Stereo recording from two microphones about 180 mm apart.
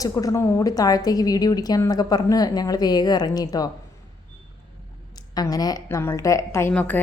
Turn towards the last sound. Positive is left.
turn(degrees=10)  # may be behind; listen again after turning